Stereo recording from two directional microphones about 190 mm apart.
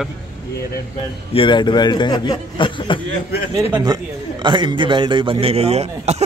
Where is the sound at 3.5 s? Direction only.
15° right (ahead or behind); by 6.2 s 35° right (ahead or behind).